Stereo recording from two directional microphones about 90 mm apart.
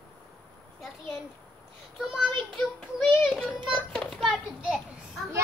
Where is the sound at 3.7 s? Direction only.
5° left (ahead or behind).